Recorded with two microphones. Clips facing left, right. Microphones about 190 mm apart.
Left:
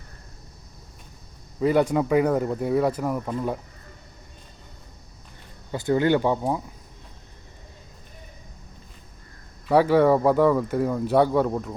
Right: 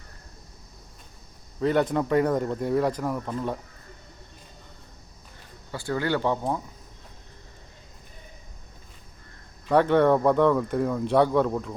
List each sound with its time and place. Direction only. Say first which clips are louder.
1.6 s speech: left 3 dB; 10° left (ahead or behind)
5.7 s speech: left 6 dB; 20° left (ahead or behind)
9.6 s speech: left 2 dB; 5° left (ahead or behind)